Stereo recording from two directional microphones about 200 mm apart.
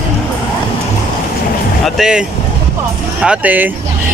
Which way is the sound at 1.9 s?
5° right (ahead or behind).